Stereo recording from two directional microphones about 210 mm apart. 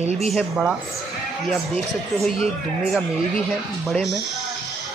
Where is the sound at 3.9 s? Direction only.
Centre (ahead or behind).